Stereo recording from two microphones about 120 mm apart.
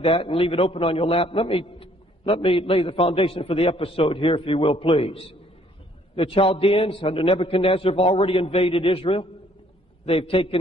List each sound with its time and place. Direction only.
0.0 s a man's voice: 50° left (ahead or behind)